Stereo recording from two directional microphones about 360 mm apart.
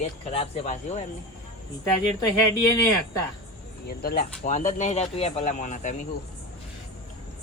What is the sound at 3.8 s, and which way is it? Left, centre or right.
Speech, left.